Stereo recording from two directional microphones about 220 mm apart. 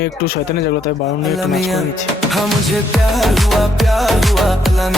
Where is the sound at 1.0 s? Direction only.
Centre (ahead or behind).